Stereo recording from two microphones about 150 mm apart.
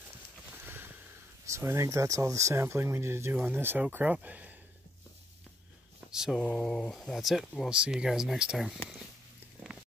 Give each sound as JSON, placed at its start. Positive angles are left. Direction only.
{"t": 0.7, "sound": "a sound", "side_deg": -15}
{"t": 1.4, "sound": "speech", "side_deg": -20}
{"t": 6.1, "sound": "speech", "side_deg": -5}